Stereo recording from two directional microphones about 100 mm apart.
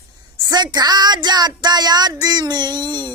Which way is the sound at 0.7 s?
45° right (ahead or behind).